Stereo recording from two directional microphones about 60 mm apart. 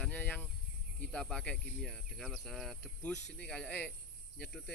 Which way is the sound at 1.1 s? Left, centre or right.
Centre.